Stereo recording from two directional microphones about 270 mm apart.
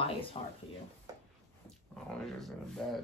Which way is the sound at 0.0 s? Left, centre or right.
Left.